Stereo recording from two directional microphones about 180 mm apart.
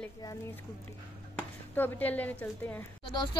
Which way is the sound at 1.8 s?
10° left (ahead or behind).